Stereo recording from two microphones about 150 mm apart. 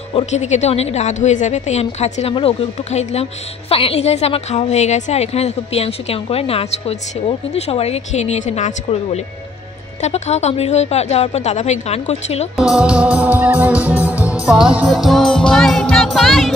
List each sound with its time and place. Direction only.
0.1 s a woman's voice: 50° left (ahead or behind)
12.5 s music: 5° right (ahead or behind)